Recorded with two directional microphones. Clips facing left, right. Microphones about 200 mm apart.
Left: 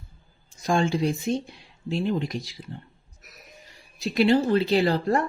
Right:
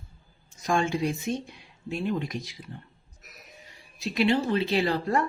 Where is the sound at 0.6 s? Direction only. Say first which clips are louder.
Left 3 dB; 30° left (ahead or behind).